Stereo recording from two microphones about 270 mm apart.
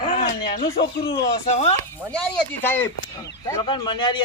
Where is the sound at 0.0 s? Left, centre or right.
Left.